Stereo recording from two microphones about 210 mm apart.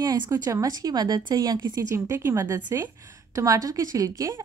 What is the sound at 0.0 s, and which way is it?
A woman's voice, 20° right (ahead or behind).